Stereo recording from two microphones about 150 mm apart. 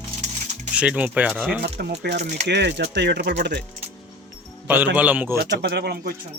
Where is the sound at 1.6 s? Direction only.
90° right.